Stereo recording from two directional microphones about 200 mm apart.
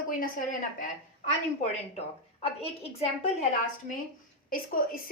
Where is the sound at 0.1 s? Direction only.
40° left (ahead or behind).